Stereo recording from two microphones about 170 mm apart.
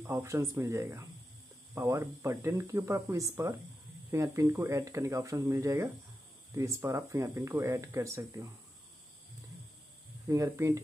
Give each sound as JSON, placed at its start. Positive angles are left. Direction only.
{"t": 0.0, "sound": "speech", "side_deg": -15}
{"t": 10.2, "sound": "speech", "side_deg": -15}